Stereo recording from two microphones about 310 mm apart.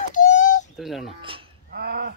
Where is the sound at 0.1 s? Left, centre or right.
Left.